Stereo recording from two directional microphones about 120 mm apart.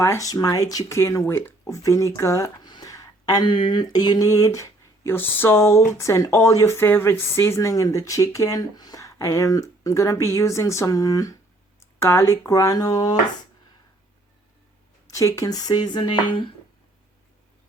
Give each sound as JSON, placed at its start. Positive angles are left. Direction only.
{"t": 0.0, "sound": "speech", "side_deg": 25}
{"t": 15.0, "sound": "a sound", "side_deg": 25}
{"t": 15.4, "sound": "speech", "side_deg": 30}